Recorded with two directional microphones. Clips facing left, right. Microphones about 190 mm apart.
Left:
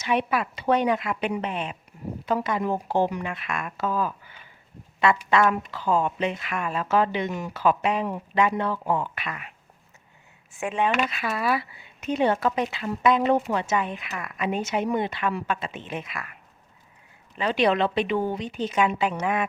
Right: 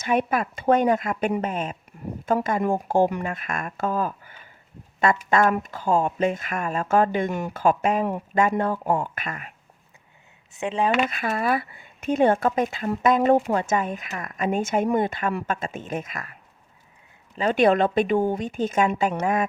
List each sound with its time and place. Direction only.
0.0 s speech: 45° right (ahead or behind)
10.6 s speech: 25° right (ahead or behind)
10.8 s speech: 50° right (ahead or behind)
17.3 s speech: 45° right (ahead or behind)